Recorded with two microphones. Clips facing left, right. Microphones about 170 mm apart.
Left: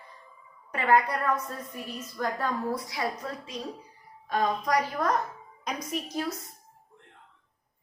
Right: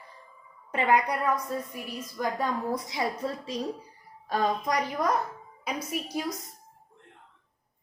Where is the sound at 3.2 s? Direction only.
30° right (ahead or behind).